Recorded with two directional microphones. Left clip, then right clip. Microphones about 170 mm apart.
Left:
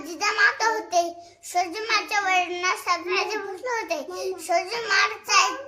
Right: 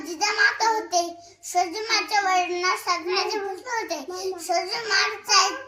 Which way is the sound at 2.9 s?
20° left (ahead or behind).